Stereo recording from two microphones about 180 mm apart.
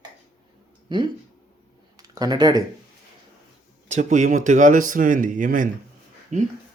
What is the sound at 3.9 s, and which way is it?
Speech, 45° right (ahead or behind).